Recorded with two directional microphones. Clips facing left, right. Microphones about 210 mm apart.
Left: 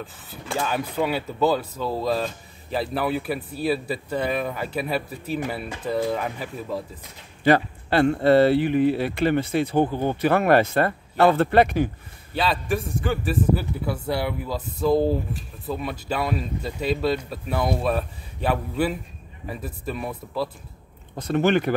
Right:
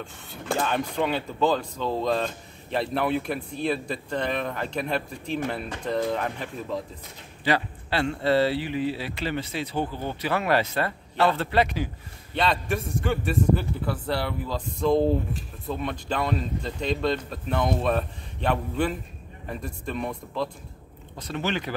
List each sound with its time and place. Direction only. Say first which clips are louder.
0.0 s speech: left 1 dB; centre (ahead or behind)
7.4 s speech: left 6 dB; 50° left (ahead or behind)
12.4 s speech: left 1 dB; centre (ahead or behind)
21.2 s speech: left 9 dB; 50° left (ahead or behind)